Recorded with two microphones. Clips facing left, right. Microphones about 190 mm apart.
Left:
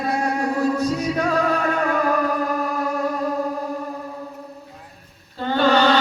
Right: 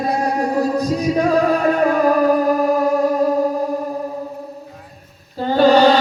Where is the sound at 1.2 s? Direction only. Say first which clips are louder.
Right 6 dB; 40° right (ahead or behind).